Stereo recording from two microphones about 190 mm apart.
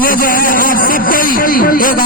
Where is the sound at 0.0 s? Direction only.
50° left (ahead or behind).